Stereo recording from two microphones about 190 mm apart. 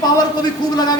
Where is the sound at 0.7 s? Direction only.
20° left (ahead or behind).